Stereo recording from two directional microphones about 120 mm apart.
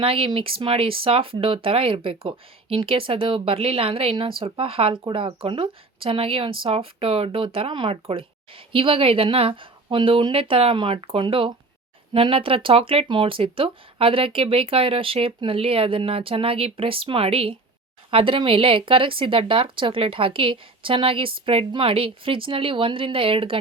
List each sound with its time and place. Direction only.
0.0 s speech: 50° right (ahead or behind)